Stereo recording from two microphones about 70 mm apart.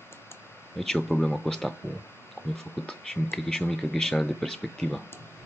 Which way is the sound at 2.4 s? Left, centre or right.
Left.